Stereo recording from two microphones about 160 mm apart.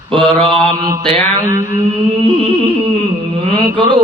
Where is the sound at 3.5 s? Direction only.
30° right (ahead or behind).